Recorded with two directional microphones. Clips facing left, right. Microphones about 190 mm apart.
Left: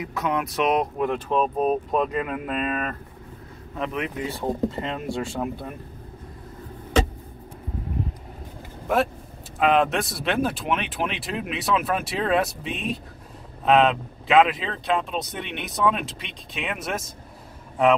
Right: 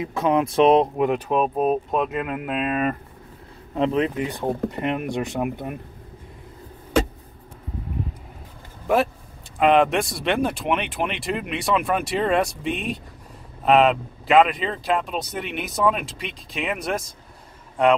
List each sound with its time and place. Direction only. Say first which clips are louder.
0.0 s speech: right 5 dB; 25° right (ahead or behind)
1.0 s speech: right 2 dB; 15° right (ahead or behind)
3.7 s speech: right 8 dB; 30° right (ahead or behind)
4.5 s speech: right 1 dB; 20° right (ahead or behind)
8.8 s speech: right 2 dB; centre (ahead or behind)